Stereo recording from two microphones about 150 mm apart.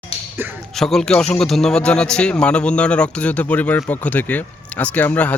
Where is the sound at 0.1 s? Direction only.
40° left (ahead or behind).